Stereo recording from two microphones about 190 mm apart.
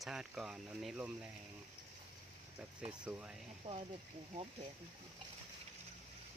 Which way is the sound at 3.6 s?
25° right (ahead or behind).